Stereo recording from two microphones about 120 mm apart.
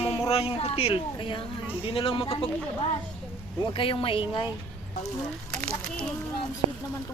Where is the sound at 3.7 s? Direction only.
45° left (ahead or behind).